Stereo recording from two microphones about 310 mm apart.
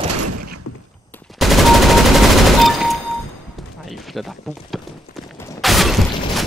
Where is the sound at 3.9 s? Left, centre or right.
Centre.